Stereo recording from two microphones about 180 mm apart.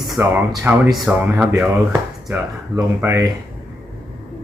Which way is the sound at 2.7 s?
15° right (ahead or behind).